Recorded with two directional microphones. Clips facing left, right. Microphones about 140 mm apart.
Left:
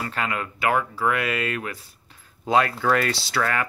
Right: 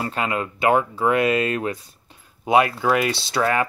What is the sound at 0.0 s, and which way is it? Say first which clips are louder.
Speech: right 3 dB; 20° right (ahead or behind).